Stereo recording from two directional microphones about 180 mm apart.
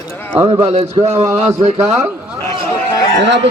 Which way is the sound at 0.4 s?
30° right (ahead or behind).